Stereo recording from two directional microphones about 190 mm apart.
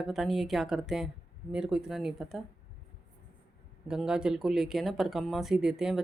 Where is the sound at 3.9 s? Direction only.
5° right (ahead or behind).